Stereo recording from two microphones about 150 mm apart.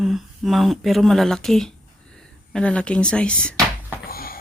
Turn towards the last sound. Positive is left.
turn(degrees=85)